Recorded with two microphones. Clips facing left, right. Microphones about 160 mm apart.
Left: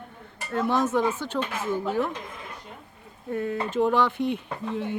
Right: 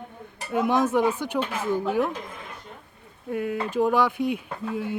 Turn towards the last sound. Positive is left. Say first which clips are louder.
# even
turn(degrees=-5)  # may be behind; listen again after turning